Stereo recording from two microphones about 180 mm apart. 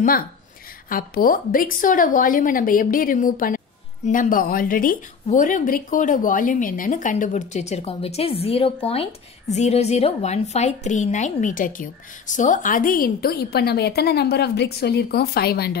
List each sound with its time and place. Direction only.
0.8 s a woman's voice: 50° left (ahead or behind)